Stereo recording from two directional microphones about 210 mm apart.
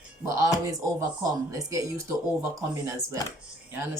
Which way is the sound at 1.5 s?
15° right (ahead or behind).